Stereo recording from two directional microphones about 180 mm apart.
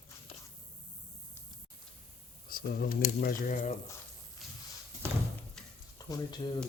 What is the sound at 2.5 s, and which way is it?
Speech, 60° left (ahead or behind).